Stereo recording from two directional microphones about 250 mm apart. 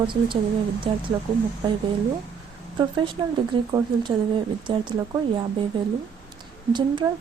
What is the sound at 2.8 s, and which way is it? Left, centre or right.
A woman's voice, centre.